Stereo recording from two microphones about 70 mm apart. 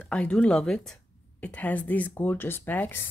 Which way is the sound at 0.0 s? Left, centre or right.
Centre.